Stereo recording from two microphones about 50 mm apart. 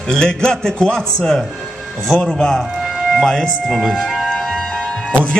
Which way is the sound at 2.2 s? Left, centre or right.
Centre.